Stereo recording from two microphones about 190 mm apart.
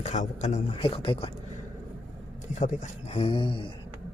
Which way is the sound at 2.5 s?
40° left (ahead or behind).